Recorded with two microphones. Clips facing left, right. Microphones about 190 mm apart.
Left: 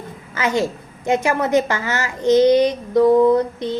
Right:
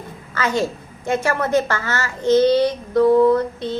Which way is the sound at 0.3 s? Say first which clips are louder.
Left 1 dB; 15° left (ahead or behind).